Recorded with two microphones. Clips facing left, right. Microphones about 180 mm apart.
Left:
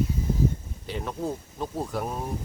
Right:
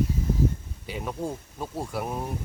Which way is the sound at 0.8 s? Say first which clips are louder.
Left 1 dB; 10° right (ahead or behind).